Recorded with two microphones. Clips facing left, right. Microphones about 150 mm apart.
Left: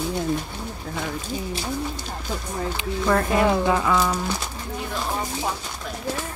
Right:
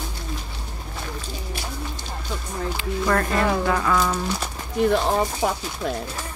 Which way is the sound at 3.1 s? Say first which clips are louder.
Left 2 dB; 10° left (ahead or behind).